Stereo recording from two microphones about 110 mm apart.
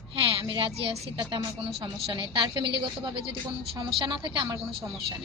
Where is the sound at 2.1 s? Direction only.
45° right (ahead or behind).